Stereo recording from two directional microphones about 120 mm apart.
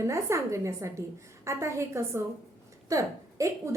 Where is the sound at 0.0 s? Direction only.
25° right (ahead or behind).